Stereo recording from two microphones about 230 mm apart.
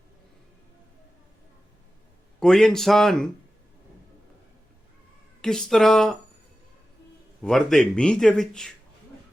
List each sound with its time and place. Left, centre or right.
2.4 s speech: centre
5.4 s speech: centre
7.4 s speech: centre